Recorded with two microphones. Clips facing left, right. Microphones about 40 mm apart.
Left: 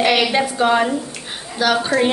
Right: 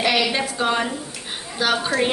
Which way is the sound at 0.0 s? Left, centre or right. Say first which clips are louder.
Left 4 dB; left.